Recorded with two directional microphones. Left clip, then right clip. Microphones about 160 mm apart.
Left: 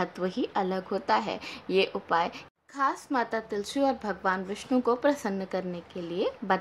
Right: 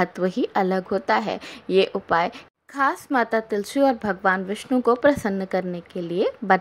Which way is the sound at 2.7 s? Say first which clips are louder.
Right 6 dB; 35° right (ahead or behind).